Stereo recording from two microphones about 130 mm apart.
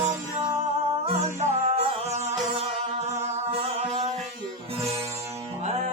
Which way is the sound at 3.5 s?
55° right (ahead or behind).